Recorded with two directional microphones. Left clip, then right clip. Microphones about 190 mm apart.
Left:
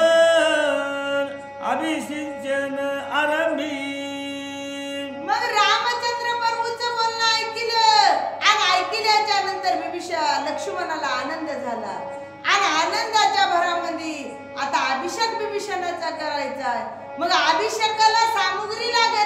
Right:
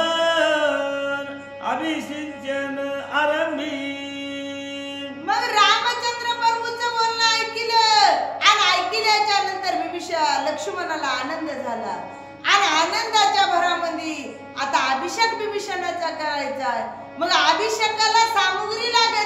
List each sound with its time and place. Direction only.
0.0 s music: 20° left (ahead or behind)
5.3 s a sound: 10° right (ahead or behind)
12.4 s a child's voice: 10° right (ahead or behind)